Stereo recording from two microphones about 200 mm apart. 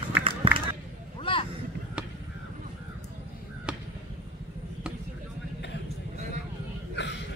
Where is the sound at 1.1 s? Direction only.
25° left (ahead or behind).